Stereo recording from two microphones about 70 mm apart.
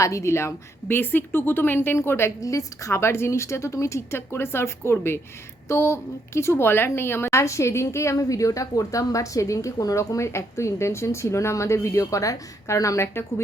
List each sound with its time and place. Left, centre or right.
0.0 s a woman's voice: left
2.4 s a woman's voice: left